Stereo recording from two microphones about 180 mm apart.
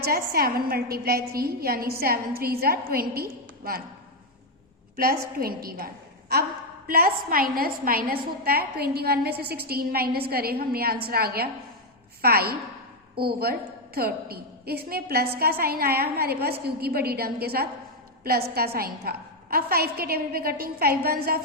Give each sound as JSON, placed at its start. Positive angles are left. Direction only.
{"t": 0.0, "sound": "a woman's voice", "side_deg": -55}
{"t": 5.6, "sound": "a woman's voice", "side_deg": -55}